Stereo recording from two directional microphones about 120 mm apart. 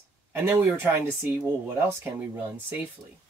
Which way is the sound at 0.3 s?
15° right (ahead or behind).